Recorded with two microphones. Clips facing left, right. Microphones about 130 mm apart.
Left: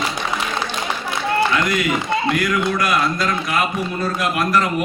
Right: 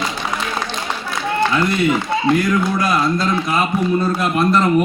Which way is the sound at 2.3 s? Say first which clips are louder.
Right 5 dB; 25° right (ahead or behind).